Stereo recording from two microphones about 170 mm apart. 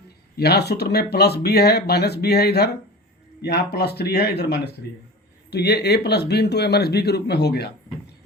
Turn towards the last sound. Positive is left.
turn(degrees=75)  # may be behind; listen again after turning